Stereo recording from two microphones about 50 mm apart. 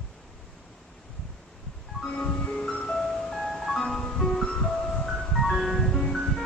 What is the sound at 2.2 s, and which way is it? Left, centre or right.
Music, centre.